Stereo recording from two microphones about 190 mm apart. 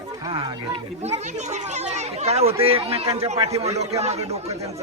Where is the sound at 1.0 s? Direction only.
35° right (ahead or behind).